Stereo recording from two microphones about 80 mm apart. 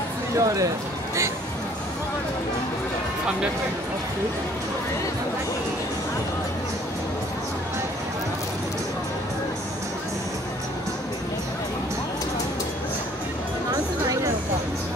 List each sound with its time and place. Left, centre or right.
0.4 s speech: right